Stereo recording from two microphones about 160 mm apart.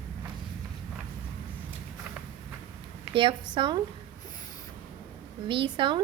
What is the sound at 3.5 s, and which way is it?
Speech, 30° right (ahead or behind).